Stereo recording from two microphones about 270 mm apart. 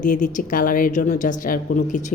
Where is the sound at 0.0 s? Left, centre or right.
Left.